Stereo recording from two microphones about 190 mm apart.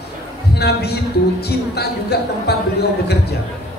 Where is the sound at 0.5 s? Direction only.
60° left (ahead or behind).